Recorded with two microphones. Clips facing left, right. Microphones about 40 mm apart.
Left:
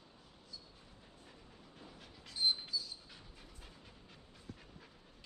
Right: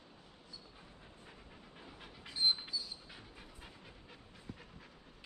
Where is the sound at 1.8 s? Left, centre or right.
Right.